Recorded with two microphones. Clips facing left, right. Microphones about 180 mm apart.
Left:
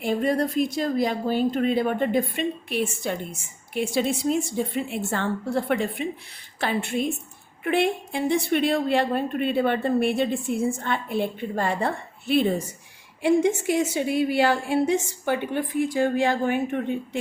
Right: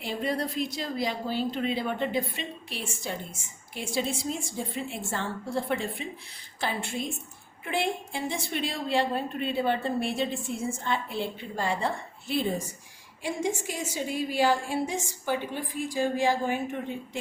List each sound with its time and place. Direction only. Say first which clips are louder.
0.0 s a woman's voice: left 7 dB; 50° left (ahead or behind)